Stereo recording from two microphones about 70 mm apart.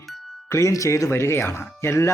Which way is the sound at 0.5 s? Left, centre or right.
Left.